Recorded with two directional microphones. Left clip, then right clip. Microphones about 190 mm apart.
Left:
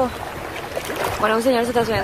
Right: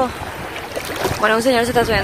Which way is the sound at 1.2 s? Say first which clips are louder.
Right 3 dB; 5° right (ahead or behind).